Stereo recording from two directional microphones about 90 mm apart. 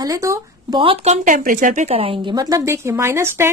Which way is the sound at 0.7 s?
90° right.